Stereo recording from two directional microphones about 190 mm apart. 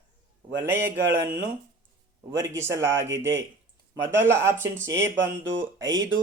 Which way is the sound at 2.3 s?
15° right (ahead or behind).